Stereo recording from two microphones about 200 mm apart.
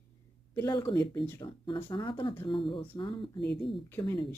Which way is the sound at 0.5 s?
20° left (ahead or behind).